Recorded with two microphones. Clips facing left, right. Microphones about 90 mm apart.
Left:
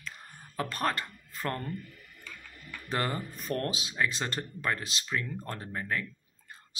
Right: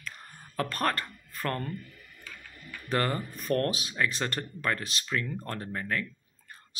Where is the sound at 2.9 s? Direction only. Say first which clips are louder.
Right 3 dB; 20° left (ahead or behind).